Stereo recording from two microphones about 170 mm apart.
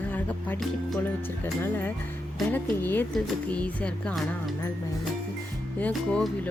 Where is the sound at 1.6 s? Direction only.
10° left (ahead or behind).